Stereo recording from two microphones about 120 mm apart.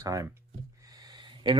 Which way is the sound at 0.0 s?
30° right (ahead or behind).